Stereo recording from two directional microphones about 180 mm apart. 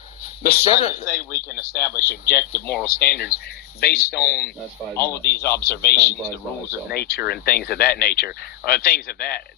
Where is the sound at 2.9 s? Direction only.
60° left (ahead or behind).